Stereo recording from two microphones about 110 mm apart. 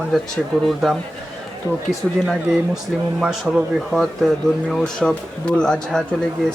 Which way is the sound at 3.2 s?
5° right (ahead or behind).